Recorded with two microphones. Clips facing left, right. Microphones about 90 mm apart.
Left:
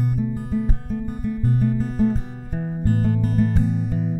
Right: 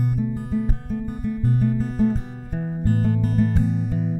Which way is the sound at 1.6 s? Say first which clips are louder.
Even; 10° left (ahead or behind).